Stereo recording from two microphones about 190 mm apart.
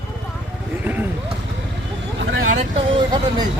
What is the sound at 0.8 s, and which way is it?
Vehicle, 10° right (ahead or behind).